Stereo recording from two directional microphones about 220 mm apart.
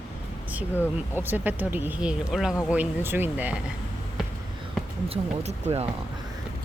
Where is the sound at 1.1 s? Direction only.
10° right (ahead or behind).